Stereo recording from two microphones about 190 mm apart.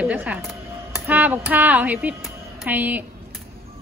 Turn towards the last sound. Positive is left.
turn(degrees=-10)  # may be behind; listen again after turning